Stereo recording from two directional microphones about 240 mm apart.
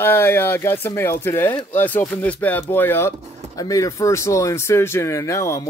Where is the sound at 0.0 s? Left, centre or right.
Centre.